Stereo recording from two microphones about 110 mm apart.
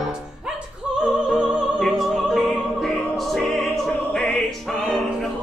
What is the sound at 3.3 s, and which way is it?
Opera, centre (ahead or behind).